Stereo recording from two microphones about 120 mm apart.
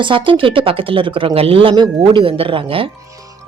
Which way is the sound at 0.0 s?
45° right (ahead or behind).